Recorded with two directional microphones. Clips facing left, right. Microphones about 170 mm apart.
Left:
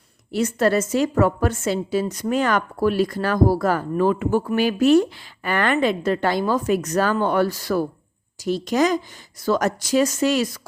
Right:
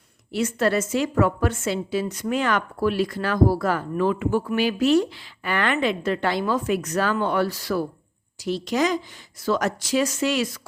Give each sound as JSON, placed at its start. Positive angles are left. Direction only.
{"t": 0.3, "sound": "a woman's voice", "side_deg": 40}